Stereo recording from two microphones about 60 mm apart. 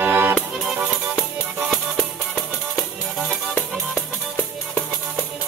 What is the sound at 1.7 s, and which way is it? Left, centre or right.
Music, centre.